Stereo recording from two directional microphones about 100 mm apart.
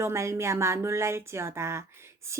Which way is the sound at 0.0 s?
30° right (ahead or behind).